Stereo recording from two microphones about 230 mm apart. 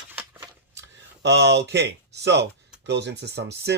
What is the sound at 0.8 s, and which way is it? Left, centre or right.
Speech, right.